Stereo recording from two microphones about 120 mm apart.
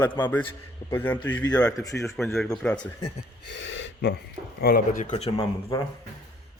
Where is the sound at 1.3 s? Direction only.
30° left (ahead or behind).